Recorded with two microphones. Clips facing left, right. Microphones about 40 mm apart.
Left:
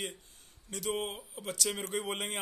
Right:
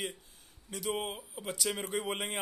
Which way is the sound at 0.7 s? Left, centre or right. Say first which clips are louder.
Even; centre.